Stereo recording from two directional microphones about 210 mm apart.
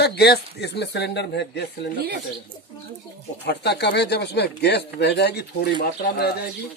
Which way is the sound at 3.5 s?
55° left (ahead or behind).